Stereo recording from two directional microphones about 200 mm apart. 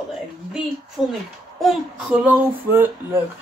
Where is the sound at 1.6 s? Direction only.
5° right (ahead or behind).